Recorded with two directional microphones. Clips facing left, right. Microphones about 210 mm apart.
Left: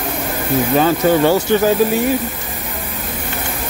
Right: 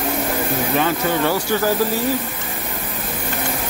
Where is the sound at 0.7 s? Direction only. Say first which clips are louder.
Left 7 dB; 30° left (ahead or behind).